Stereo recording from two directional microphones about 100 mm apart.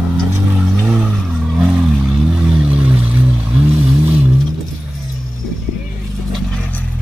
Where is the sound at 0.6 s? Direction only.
10° right (ahead or behind).